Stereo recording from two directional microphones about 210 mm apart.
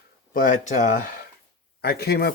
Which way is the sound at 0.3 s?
40° left (ahead or behind).